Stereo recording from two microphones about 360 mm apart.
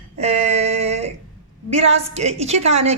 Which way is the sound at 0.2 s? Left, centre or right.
Centre.